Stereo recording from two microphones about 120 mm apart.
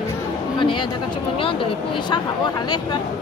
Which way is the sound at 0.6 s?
45° left (ahead or behind).